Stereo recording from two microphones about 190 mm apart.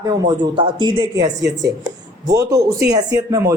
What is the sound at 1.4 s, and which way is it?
Speech, 65° right (ahead or behind).